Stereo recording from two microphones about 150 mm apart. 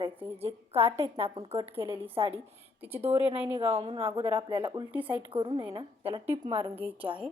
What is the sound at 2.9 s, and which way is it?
Speech, 15° right (ahead or behind).